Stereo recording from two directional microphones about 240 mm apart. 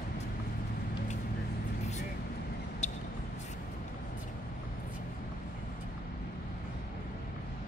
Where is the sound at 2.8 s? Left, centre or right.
Left.